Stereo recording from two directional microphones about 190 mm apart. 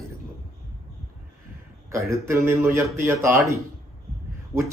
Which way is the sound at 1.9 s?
15° right (ahead or behind).